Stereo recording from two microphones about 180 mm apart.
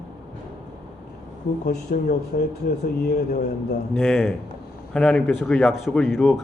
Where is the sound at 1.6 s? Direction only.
55° left (ahead or behind).